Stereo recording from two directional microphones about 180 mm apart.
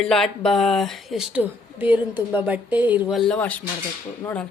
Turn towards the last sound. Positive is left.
turn(degrees=5)  # may be behind; listen again after turning